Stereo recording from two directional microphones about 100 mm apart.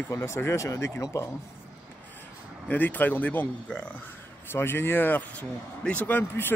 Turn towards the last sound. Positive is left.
turn(degrees=20)  # may be behind; listen again after turning